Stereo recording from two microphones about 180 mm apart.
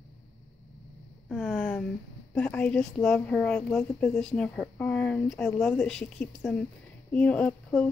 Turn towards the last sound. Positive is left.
turn(degrees=5)  # may be behind; listen again after turning